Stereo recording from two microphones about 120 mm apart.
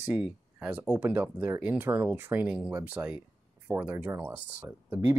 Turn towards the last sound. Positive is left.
turn(degrees=-20)  # may be behind; listen again after turning